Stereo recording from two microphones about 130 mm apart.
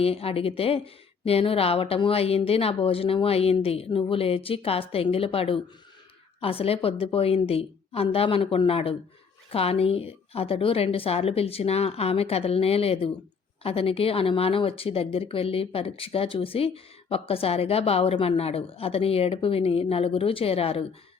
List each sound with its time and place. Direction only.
0.0 s speech: 50° left (ahead or behind)